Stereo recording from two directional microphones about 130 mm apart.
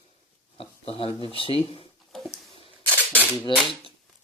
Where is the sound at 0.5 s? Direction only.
45° left (ahead or behind).